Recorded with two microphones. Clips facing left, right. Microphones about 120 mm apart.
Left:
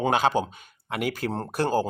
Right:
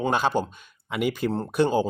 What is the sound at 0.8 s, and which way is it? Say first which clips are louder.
Speech: right 3 dB; 60° left (ahead or behind).